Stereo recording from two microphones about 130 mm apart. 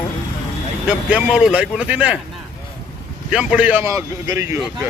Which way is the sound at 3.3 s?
10° right (ahead or behind).